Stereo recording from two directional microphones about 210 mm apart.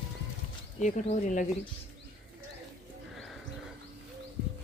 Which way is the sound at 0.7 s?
35° left (ahead or behind).